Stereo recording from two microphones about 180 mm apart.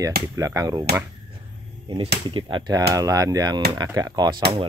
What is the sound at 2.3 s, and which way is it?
Speech, 25° right (ahead or behind).